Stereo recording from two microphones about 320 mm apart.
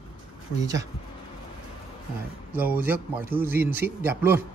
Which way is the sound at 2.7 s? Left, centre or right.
Centre.